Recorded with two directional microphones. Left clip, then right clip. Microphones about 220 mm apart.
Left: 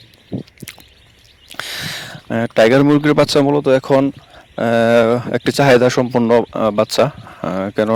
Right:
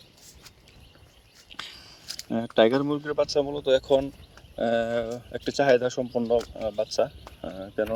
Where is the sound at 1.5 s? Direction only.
50° left (ahead or behind).